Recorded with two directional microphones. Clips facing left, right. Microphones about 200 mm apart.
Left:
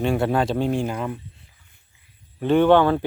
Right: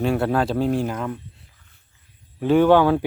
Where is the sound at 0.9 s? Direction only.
5° left (ahead or behind).